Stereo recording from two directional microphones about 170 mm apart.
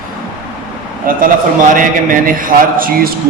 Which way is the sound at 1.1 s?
55° right (ahead or behind).